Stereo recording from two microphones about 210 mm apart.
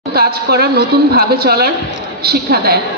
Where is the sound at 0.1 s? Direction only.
50° right (ahead or behind).